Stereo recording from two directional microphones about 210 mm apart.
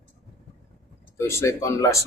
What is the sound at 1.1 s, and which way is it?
Speech, 15° left (ahead or behind).